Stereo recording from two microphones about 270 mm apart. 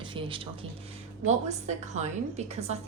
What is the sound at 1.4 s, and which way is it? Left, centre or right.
Speech, right.